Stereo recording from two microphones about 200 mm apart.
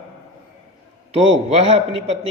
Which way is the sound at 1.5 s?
30° right (ahead or behind).